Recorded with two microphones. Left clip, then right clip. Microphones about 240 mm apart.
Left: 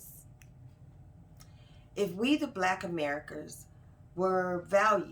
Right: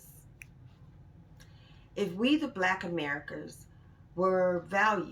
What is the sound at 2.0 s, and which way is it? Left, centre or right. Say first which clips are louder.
A woman's voice: right 1 dB; centre.